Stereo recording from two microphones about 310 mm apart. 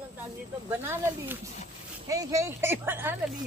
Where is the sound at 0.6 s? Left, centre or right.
Centre.